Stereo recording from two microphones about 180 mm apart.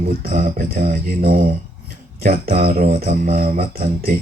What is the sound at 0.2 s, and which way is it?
Speech, 50° right (ahead or behind).